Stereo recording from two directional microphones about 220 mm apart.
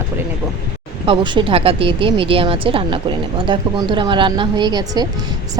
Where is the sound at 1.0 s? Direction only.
20° right (ahead or behind).